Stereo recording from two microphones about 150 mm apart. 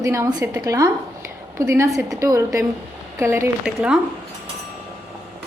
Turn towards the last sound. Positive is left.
turn(degrees=-5)  # may be behind; listen again after turning